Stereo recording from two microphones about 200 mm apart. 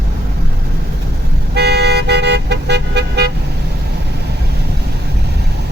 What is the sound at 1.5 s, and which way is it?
Vehicle, 55° right (ahead or behind).